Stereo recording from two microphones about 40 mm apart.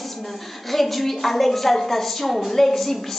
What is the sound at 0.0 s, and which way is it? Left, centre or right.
A woman's voice, centre.